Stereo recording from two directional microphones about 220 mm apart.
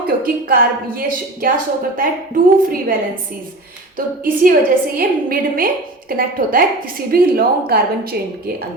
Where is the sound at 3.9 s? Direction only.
40° right (ahead or behind).